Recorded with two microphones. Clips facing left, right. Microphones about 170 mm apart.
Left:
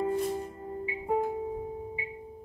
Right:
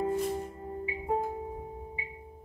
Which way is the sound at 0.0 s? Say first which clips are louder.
Left 1 dB; 10° right (ahead or behind).